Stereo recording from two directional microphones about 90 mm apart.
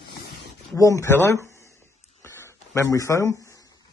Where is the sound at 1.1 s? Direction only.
25° left (ahead or behind).